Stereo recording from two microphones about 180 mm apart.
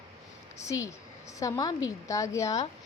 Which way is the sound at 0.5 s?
15° left (ahead or behind).